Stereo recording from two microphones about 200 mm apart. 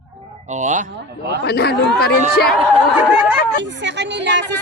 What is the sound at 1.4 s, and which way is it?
Speech, 55° left (ahead or behind).